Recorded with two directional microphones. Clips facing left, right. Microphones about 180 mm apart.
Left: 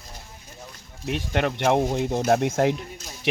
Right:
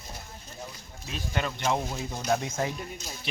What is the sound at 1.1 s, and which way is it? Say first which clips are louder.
Speech: left 8 dB; 70° left (ahead or behind).